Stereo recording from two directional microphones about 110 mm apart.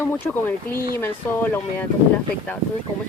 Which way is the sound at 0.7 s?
20° left (ahead or behind).